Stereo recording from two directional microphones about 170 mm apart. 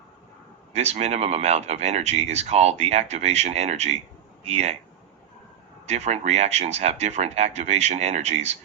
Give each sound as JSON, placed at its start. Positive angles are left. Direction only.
{"t": 0.7, "sound": "speech", "side_deg": -40}
{"t": 5.8, "sound": "speech", "side_deg": -40}